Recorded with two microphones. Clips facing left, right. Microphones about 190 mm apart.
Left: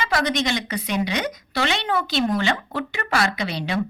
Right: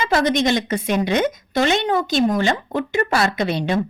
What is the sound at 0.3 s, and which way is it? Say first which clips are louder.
Speech: right 6 dB; 50° right (ahead or behind).